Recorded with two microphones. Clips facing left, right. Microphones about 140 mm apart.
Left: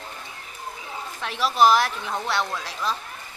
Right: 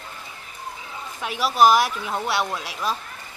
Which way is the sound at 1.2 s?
5° right (ahead or behind).